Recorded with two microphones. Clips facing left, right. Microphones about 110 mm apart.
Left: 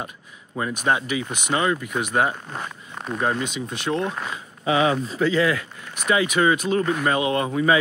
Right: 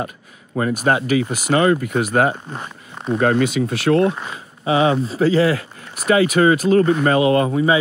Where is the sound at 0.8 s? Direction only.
55° right (ahead or behind).